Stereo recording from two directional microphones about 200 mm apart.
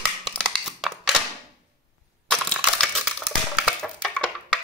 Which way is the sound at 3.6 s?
5° left (ahead or behind).